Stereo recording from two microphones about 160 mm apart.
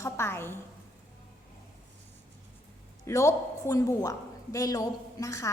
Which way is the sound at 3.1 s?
20° left (ahead or behind).